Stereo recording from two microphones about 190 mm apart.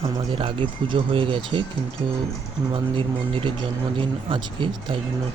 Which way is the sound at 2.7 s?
25° right (ahead or behind).